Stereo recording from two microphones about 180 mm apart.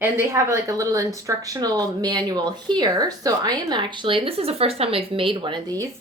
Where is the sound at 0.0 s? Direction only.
15° right (ahead or behind).